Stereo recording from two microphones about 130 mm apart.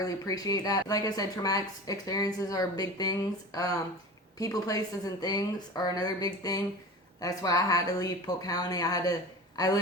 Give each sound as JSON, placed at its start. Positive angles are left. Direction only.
{"t": 0.0, "sound": "a woman's voice", "side_deg": 30}